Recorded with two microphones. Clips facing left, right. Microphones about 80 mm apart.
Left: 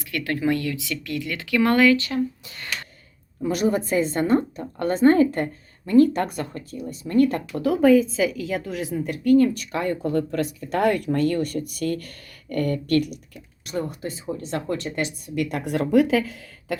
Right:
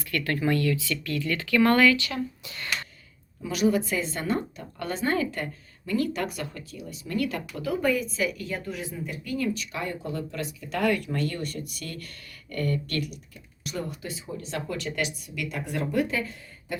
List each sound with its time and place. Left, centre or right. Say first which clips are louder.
0.0 s speech: left 3 dB; centre
1.9 s a woman's voice: left 5 dB; left
8.4 s a woman's voice: left 6 dB; left
15.4 s speech: left 3 dB; left